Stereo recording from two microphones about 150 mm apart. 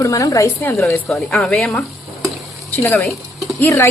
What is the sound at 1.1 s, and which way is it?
Speech, 5° left (ahead or behind).